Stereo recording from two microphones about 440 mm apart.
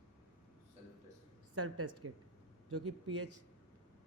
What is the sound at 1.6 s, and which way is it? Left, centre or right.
Speech, right.